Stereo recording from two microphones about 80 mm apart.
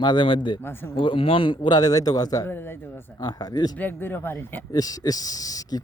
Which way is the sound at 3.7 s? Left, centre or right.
Left.